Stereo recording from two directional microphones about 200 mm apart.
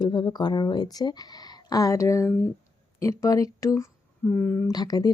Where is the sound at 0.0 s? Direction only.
20° left (ahead or behind).